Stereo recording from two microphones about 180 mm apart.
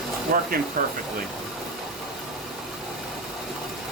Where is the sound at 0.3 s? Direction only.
55° right (ahead or behind).